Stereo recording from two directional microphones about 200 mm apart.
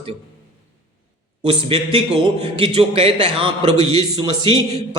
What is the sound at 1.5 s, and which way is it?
A man's voice, 25° right (ahead or behind).